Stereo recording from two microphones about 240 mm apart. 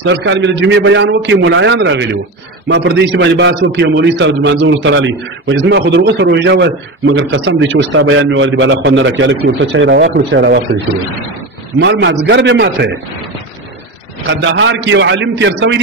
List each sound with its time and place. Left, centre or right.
0.0 s a man's voice: right
11.8 s a man's voice: right
14.2 s a man's voice: right